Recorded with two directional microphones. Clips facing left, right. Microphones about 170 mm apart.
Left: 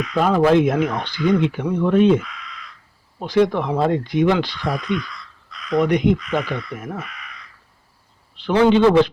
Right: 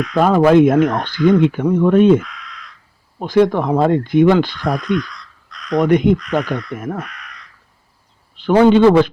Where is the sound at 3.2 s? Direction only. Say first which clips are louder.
Right 4 dB; 50° right (ahead or behind).